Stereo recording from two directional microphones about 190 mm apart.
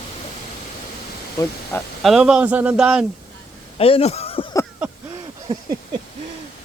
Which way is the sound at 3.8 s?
30° left (ahead or behind).